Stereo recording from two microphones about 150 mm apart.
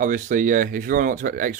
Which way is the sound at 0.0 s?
60° right (ahead or behind).